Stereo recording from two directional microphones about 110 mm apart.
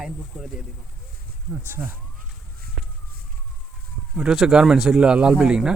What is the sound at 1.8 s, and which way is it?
Speech, 10° right (ahead or behind).